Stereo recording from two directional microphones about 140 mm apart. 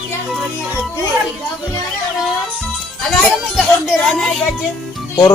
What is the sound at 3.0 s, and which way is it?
Speech, 5° left (ahead or behind).